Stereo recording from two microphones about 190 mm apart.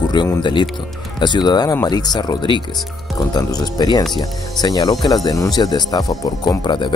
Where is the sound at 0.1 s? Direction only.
25° left (ahead or behind).